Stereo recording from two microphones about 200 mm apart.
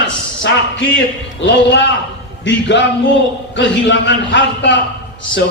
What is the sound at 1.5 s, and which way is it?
A man's voice, 60° left (ahead or behind).